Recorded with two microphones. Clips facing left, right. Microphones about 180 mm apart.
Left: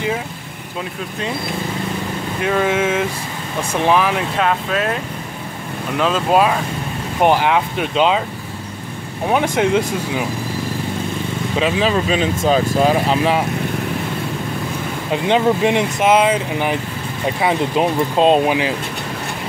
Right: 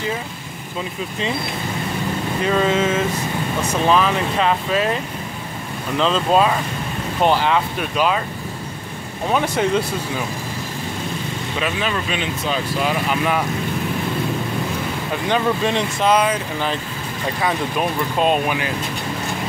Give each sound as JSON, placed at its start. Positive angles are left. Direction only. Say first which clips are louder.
{"t": 2.4, "sound": "speech", "louder": "left 1 dB", "side_deg": 5}
{"t": 4.4, "sound": "speech", "louder": "even", "side_deg": 0}
{"t": 5.9, "sound": "speech", "louder": "left 1 dB", "side_deg": 5}
{"t": 9.3, "sound": "speech", "louder": "left 3 dB", "side_deg": 15}
{"t": 11.6, "sound": "speech", "louder": "left 6 dB", "side_deg": 30}
{"t": 15.0, "sound": "speech", "louder": "left 5 dB", "side_deg": 20}